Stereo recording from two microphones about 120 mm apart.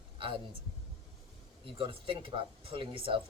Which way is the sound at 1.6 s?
45° right (ahead or behind).